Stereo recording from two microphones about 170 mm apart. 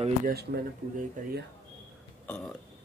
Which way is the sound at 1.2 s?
50° right (ahead or behind).